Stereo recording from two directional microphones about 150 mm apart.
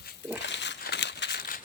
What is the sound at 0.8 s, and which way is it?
Crumpling, 90° left.